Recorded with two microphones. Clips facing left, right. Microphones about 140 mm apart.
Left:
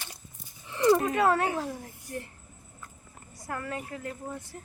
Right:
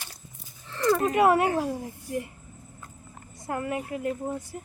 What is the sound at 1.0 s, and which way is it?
Speech, 15° right (ahead or behind).